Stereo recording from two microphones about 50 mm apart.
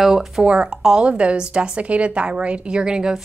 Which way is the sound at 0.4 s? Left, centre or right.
Centre.